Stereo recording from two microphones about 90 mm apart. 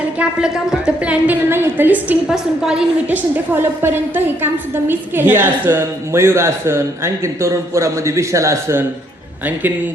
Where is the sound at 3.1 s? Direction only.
20° right (ahead or behind).